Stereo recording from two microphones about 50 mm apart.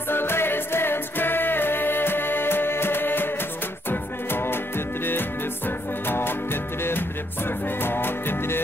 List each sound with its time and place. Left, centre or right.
0.1 s music: left